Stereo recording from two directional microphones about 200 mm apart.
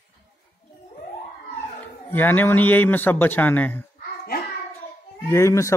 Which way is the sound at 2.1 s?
10° left (ahead or behind).